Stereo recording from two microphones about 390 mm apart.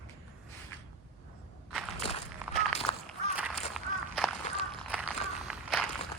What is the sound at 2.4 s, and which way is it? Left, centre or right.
Walk, centre.